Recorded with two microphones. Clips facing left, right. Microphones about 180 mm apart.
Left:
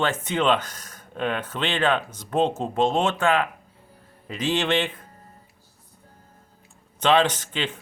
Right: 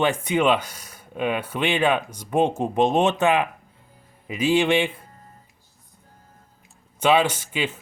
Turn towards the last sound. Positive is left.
turn(degrees=-10)  # may be behind; listen again after turning